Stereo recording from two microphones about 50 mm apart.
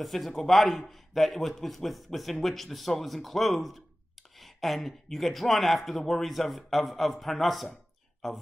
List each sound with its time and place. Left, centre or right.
0.0 s speech: centre